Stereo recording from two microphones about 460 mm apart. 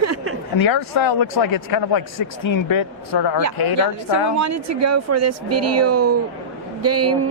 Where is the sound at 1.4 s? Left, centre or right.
Left.